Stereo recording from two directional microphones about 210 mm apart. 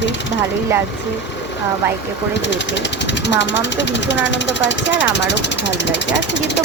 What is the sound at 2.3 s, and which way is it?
Speech, 55° left (ahead or behind).